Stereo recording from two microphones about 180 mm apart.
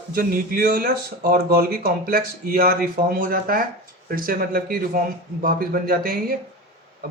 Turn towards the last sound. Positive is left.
turn(degrees=-55)  # may be behind; listen again after turning